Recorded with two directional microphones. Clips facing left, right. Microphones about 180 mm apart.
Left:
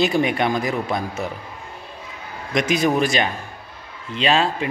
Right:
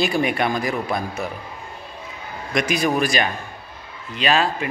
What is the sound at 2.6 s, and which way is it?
Speech, 20° left (ahead or behind).